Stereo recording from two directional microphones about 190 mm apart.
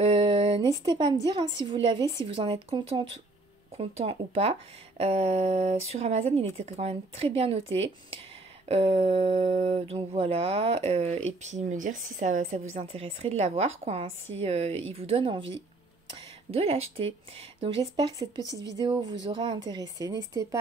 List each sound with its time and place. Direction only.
0.0 s a woman's voice: 30° right (ahead or behind)